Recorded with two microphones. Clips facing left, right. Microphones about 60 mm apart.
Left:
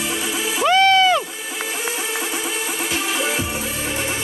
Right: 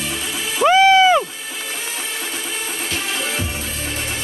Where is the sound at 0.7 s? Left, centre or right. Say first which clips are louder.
Right 3 dB; centre.